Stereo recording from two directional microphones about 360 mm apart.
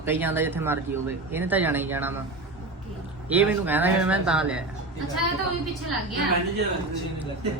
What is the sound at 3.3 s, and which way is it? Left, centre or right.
Speech, centre.